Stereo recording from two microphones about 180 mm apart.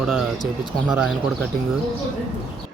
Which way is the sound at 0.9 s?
Centre (ahead or behind).